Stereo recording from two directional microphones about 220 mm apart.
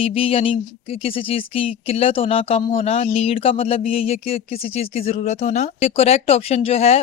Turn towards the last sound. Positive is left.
turn(degrees=30)  # may be behind; listen again after turning